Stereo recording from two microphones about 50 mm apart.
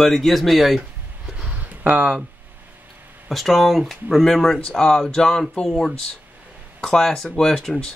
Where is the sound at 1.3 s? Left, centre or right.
Right.